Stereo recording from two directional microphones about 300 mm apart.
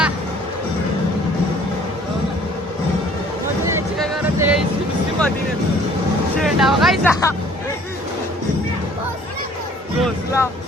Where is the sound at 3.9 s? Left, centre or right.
Centre.